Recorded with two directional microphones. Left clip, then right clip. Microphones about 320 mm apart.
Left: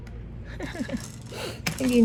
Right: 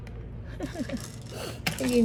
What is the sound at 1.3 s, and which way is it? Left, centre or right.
Gasp, left.